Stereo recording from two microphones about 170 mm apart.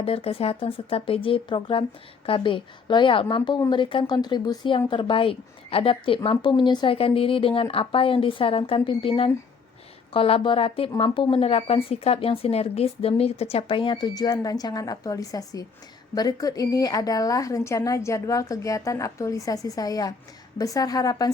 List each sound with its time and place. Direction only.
0.0 s a woman's voice: 35° left (ahead or behind)